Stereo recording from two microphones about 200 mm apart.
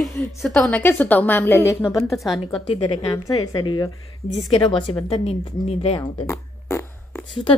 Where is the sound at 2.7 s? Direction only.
25° left (ahead or behind).